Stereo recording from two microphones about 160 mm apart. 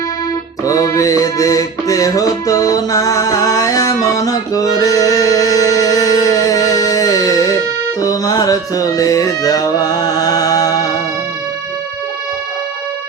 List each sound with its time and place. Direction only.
0.6 s music: 20° left (ahead or behind)